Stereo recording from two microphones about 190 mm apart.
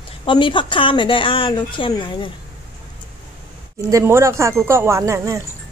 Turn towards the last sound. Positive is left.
turn(degrees=-15)  # may be behind; listen again after turning